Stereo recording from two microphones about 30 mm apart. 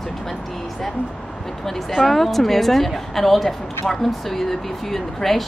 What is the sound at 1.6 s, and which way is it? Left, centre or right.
A woman's voice, centre.